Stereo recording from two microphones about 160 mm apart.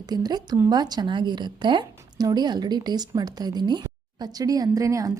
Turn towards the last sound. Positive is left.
turn(degrees=-20)  # may be behind; listen again after turning